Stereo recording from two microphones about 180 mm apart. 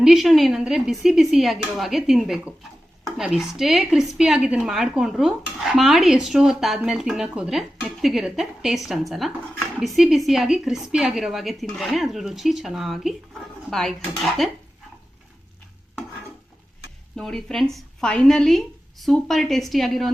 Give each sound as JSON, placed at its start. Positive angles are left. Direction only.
{"t": 0.0, "sound": "speech", "side_deg": 0}
{"t": 17.2, "sound": "speech", "side_deg": 5}